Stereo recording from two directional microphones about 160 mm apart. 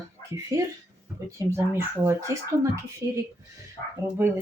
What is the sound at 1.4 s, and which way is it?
Speech, 20° right (ahead or behind).